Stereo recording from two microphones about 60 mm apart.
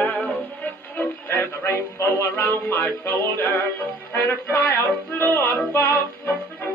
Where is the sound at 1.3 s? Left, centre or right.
Left.